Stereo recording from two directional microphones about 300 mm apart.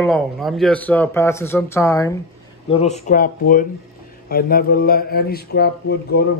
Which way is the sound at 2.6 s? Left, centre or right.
Left.